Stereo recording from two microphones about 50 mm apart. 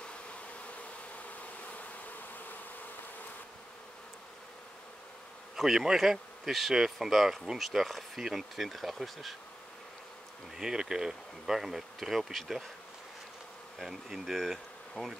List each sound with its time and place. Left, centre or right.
1.4 s bee: left
5.6 s speech: centre
10.6 s bee: centre
13.7 s speech: centre